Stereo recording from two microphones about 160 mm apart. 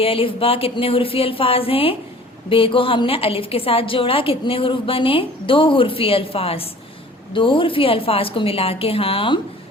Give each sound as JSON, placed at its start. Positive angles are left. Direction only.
{"t": 0.0, "sound": "a woman's voice", "side_deg": 35}